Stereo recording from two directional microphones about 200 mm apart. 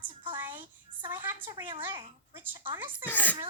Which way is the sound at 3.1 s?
10° left (ahead or behind).